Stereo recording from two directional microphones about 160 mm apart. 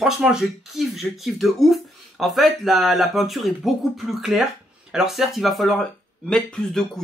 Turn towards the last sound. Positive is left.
turn(degrees=5)  # may be behind; listen again after turning